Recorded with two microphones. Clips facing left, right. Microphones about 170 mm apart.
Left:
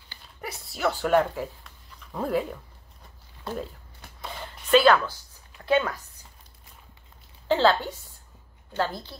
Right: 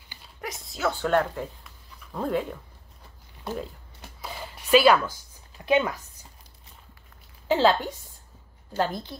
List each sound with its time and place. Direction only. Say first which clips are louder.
0.4 s speech: left 1 dB; 5° left (ahead or behind)
4.2 s a sound: even; 5° right (ahead or behind)
7.4 s a woman's voice: even; 15° right (ahead or behind)